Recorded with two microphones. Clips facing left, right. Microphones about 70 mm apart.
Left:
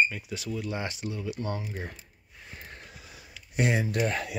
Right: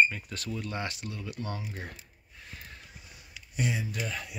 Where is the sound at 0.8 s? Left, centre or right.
Left.